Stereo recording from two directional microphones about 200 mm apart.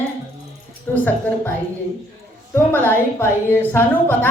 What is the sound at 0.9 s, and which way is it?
Speech, 10° left (ahead or behind).